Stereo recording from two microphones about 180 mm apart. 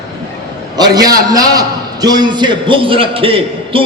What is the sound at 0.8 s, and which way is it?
A man's voice, 20° right (ahead or behind).